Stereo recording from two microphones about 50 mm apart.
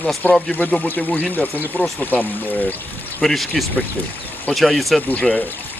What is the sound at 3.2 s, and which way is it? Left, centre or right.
Speech, centre.